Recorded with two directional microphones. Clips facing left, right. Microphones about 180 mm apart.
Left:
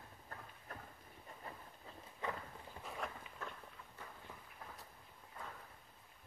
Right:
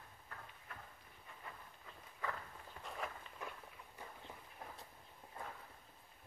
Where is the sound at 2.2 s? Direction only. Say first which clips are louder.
Left 1 dB; 20° left (ahead or behind).